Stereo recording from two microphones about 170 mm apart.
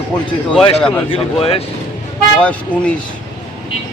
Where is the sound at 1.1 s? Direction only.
35° left (ahead or behind).